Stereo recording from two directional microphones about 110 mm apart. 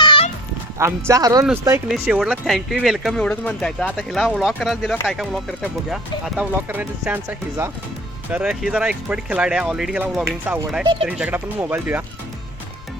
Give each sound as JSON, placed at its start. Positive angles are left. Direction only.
{"t": 0.0, "sound": "music", "side_deg": 50}
{"t": 0.8, "sound": "speech", "side_deg": -25}
{"t": 1.9, "sound": "speech", "side_deg": -5}
{"t": 10.2, "sound": "speech", "side_deg": -15}